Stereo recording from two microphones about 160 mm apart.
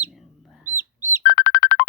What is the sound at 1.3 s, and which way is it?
Music, 60° left (ahead or behind).